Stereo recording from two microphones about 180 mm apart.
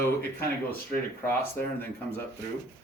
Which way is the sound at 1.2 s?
10° left (ahead or behind).